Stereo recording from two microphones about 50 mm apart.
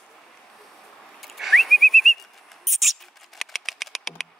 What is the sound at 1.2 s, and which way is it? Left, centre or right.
Whistling, centre.